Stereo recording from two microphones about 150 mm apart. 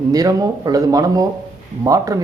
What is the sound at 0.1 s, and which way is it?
A man's voice, 25° right (ahead or behind).